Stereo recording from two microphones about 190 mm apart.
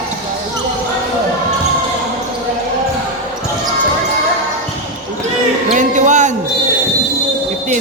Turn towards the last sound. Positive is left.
turn(degrees=-40)  # may be behind; listen again after turning